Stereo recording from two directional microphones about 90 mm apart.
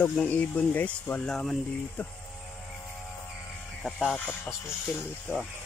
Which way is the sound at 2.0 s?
20° left (ahead or behind).